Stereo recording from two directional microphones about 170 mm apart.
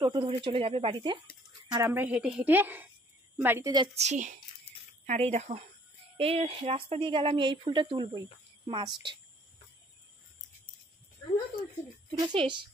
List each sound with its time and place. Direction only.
0.0 s speech: 30° right (ahead or behind)
1.7 s a woman's voice: 15° right (ahead or behind)
3.7 s speech: 30° right (ahead or behind)
4.0 s a woman's voice: 45° right (ahead or behind); by 9.2 s 25° right (ahead or behind)
12.1 s speech: 30° right (ahead or behind)